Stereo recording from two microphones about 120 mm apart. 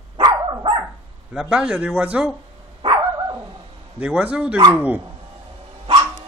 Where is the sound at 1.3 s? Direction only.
5° right (ahead or behind).